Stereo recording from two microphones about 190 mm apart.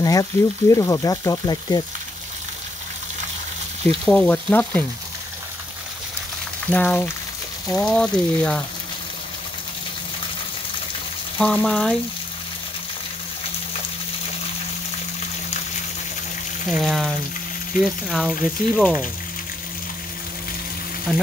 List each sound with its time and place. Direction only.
0.0 s speech: 20° left (ahead or behind)
4.0 s frying: 5° left (ahead or behind)
6.7 s frying: 10° left (ahead or behind)
7.6 s speech: 5° left (ahead or behind)
11.3 s speech: 5° left (ahead or behind)
16.7 s speech: centre (ahead or behind)
21.1 s speech: centre (ahead or behind)